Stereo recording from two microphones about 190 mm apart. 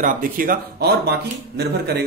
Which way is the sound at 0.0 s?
45° right (ahead or behind).